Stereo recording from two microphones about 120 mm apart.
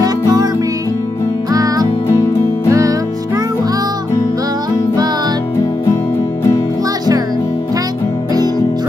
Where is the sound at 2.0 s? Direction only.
25° left (ahead or behind).